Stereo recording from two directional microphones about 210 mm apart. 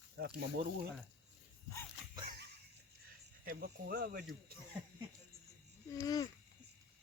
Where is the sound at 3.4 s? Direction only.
45° right (ahead or behind).